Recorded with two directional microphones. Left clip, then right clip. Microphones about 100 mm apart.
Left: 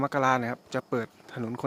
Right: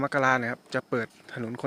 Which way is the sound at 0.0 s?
20° left (ahead or behind).